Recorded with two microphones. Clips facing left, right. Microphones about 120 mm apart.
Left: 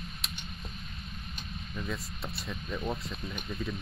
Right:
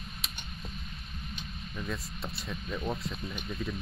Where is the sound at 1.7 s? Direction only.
Centre (ahead or behind).